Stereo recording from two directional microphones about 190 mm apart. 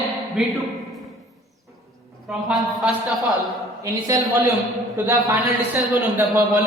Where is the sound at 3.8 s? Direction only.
15° right (ahead or behind).